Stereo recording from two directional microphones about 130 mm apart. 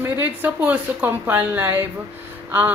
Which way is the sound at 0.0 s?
15° right (ahead or behind).